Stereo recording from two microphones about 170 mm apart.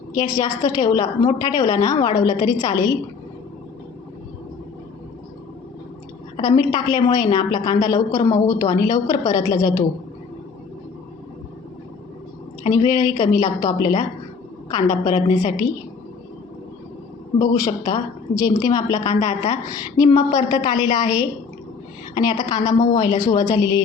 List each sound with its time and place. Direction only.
0.1 s a woman's voice: 20° left (ahead or behind)
6.3 s a woman's voice: 25° left (ahead or behind)
12.7 s a woman's voice: 25° left (ahead or behind)
17.4 s a woman's voice: 20° left (ahead or behind)